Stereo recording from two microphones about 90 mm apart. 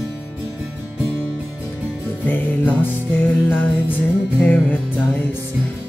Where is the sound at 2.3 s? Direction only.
20° left (ahead or behind).